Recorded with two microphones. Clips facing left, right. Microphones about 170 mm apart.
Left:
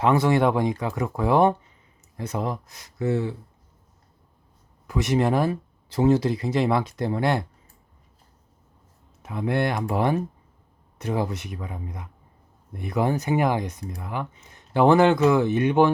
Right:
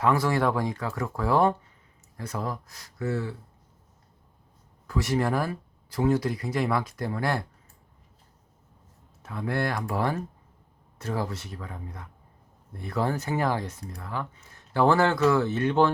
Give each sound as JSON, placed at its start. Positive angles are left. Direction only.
{"t": 0.0, "sound": "speech", "side_deg": 20}
{"t": 4.9, "sound": "speech", "side_deg": 20}
{"t": 9.2, "sound": "speech", "side_deg": 20}